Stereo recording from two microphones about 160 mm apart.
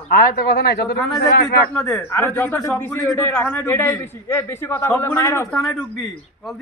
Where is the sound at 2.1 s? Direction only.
15° left (ahead or behind).